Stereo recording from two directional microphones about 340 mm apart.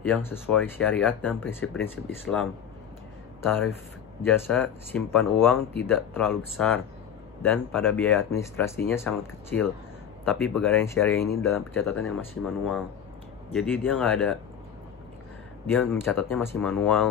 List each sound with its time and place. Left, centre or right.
0.0 s speech: centre
3.4 s speech: centre
7.4 s speech: centre
15.6 s speech: centre